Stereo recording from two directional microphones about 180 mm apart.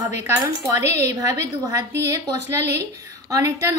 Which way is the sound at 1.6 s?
20° right (ahead or behind).